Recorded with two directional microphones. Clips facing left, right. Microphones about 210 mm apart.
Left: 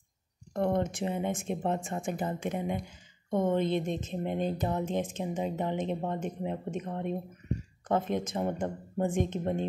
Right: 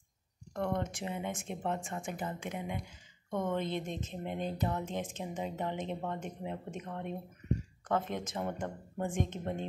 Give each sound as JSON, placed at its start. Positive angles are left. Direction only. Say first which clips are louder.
{"t": 0.5, "sound": "speech", "louder": "left 6 dB", "side_deg": 30}